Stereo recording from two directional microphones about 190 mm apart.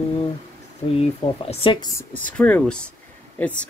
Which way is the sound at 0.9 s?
30° left (ahead or behind).